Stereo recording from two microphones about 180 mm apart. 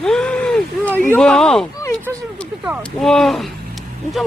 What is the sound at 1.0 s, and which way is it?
Speech, 5° left (ahead or behind).